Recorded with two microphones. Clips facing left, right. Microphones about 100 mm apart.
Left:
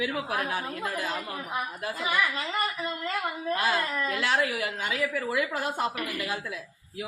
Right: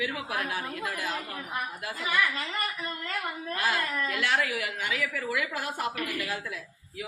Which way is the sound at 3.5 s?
25° left (ahead or behind).